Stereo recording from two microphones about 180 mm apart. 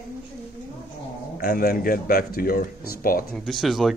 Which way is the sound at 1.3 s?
55° left (ahead or behind).